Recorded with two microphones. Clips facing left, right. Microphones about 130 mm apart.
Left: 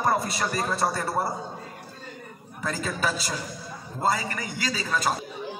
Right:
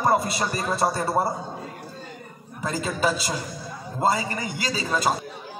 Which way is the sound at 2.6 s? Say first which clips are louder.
Right 4 dB; 20° right (ahead or behind).